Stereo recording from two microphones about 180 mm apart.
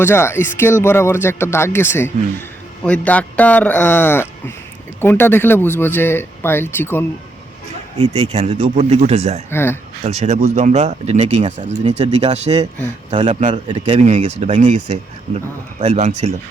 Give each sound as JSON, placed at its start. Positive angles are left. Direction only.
{"t": 0.0, "sound": "speech", "side_deg": 15}
{"t": 7.9, "sound": "speech", "side_deg": -30}
{"t": 9.5, "sound": "speech", "side_deg": 15}
{"t": 10.0, "sound": "speech", "side_deg": -35}
{"t": 13.9, "sound": "speech", "side_deg": -40}